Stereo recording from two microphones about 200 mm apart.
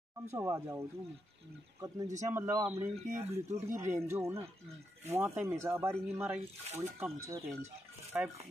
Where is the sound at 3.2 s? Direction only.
30° right (ahead or behind).